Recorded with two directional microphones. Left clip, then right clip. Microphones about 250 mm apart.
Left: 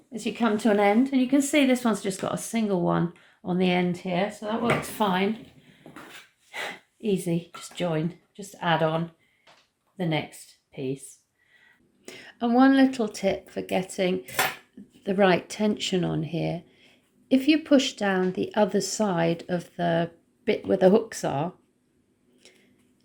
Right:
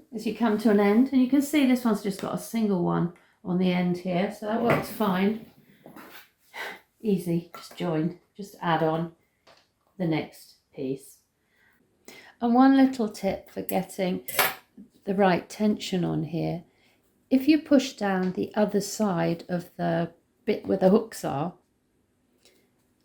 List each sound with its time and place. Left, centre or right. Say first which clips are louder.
0.1 s a woman's voice: left 1 dB; left
6.5 s speech: left 3 dB; left
12.0 s speech: even; centre